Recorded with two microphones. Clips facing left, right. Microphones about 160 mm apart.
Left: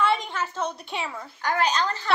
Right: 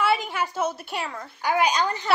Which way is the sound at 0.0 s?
5° right (ahead or behind).